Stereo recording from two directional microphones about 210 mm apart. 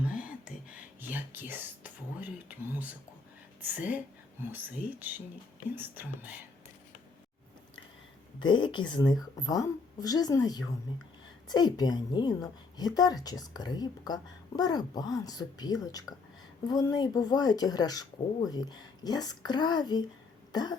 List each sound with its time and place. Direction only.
0.0 s whispering: 5° right (ahead or behind)
2.5 s speech: 10° right (ahead or behind)
8.4 s a woman's voice: 20° left (ahead or behind)
20.5 s cough: 20° left (ahead or behind)